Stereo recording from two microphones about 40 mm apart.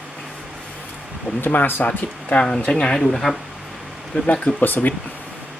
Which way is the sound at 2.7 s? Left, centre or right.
Left.